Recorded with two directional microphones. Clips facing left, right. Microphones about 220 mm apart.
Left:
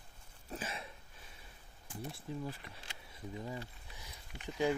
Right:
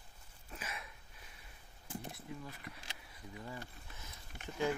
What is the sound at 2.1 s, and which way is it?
Speech, 30° left (ahead or behind).